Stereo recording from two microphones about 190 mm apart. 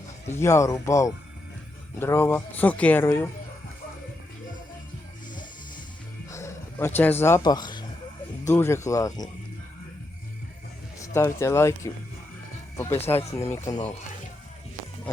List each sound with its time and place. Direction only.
0.3 s speech: 15° left (ahead or behind)
6.3 s speech: 15° left (ahead or behind)
11.1 s speech: 15° left (ahead or behind)